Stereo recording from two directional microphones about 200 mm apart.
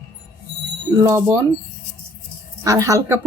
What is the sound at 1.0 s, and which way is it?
Speech, 15° right (ahead or behind).